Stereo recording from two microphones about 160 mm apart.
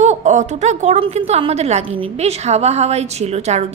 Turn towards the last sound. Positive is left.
turn(degrees=-45)  # may be behind; listen again after turning